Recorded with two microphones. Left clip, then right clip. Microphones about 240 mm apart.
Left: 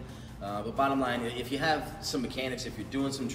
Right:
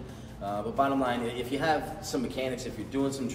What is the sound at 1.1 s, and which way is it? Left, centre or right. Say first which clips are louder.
Speech: right 2 dB; centre.